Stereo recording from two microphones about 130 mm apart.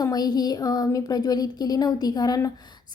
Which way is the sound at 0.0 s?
30° left (ahead or behind).